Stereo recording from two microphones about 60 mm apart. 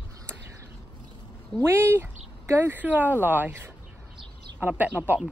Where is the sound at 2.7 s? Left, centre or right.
Right.